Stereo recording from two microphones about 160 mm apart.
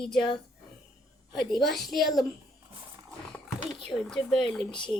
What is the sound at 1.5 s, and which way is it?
Speech, centre (ahead or behind).